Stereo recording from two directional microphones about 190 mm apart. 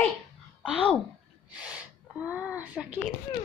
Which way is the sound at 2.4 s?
5° right (ahead or behind).